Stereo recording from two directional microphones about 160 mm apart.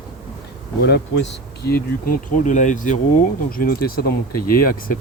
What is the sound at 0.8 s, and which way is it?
Speech, 90° left.